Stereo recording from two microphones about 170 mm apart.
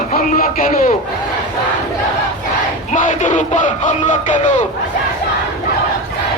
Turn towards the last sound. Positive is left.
turn(degrees=50)  # may be behind; listen again after turning